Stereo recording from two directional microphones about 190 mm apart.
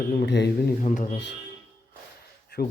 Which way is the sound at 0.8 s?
40° left (ahead or behind).